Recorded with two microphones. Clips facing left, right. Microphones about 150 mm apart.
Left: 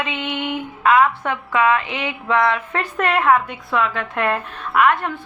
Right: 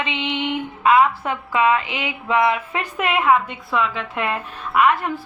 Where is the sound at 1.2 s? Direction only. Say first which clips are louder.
Left 1 dB; 25° right (ahead or behind).